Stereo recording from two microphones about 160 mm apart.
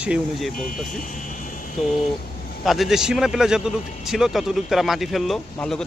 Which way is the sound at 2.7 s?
Centre (ahead or behind).